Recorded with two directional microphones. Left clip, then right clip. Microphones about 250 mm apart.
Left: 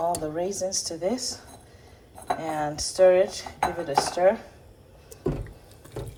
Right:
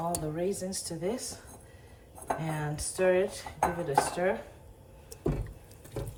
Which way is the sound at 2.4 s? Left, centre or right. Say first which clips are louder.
Left 8 dB; centre.